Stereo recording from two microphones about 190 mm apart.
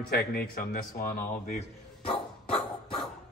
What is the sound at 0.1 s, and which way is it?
A man's voice, 55° left (ahead or behind).